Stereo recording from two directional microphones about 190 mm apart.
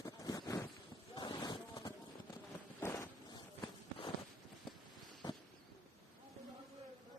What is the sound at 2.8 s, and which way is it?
Vehicle, 15° left (ahead or behind).